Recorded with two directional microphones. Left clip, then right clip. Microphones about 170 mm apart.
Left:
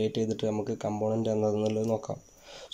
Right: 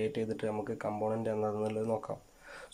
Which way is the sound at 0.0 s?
20° left (ahead or behind).